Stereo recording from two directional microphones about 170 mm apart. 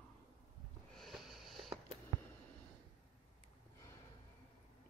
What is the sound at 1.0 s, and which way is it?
Sniff, centre (ahead or behind).